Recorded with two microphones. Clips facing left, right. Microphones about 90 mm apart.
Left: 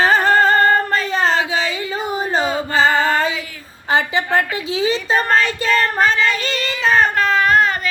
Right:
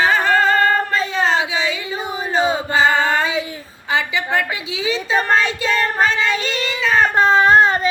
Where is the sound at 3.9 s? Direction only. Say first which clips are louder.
Left 3 dB; 40° left (ahead or behind).